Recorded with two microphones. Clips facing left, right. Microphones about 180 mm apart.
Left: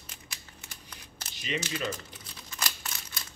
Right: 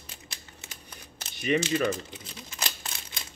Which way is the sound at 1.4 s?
60° right (ahead or behind).